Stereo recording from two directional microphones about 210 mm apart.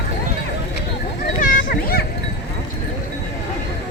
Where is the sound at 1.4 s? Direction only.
45° left (ahead or behind).